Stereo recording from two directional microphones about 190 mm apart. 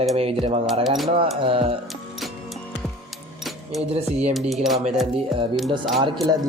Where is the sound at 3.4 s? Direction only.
Centre (ahead or behind).